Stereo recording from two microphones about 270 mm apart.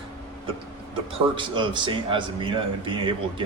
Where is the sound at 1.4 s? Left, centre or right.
Centre.